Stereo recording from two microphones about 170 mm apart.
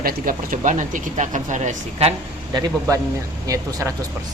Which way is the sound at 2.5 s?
20° right (ahead or behind).